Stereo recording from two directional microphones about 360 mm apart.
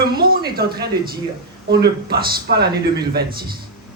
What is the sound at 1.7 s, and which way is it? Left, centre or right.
A man's voice, right.